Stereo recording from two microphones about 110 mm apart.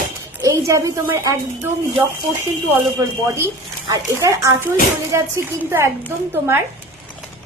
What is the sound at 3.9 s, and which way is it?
A woman's voice, 30° right (ahead or behind).